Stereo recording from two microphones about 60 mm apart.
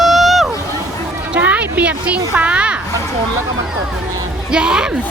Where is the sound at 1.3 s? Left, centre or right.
Right.